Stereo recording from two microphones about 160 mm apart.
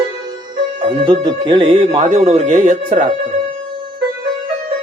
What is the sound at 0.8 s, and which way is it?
Speech, 30° right (ahead or behind).